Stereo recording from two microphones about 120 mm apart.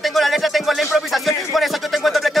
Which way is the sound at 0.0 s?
Centre (ahead or behind).